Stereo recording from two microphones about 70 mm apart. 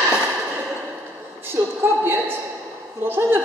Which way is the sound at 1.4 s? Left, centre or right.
Right.